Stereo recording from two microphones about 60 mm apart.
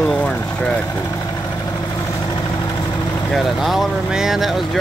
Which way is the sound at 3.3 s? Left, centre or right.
Centre.